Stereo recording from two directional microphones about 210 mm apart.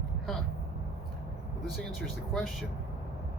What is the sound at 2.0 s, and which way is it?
Speech, centre (ahead or behind).